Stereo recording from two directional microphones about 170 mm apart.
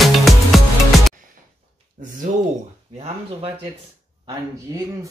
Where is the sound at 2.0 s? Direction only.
50° right (ahead or behind).